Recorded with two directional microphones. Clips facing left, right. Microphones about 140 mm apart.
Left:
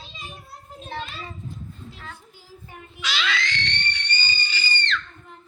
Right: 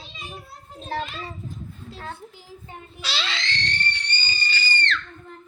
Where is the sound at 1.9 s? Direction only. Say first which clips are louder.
Right 6 dB; 35° right (ahead or behind).